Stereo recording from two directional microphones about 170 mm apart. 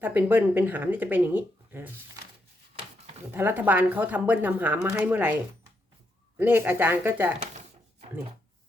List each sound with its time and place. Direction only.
0.0 s speech: 10° right (ahead or behind)
3.3 s speech: 10° right (ahead or behind)
6.3 s speech: 10° right (ahead or behind)